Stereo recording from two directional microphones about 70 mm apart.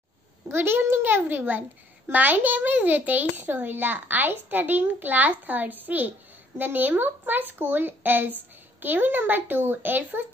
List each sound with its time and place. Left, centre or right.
0.5 s a child's voice: right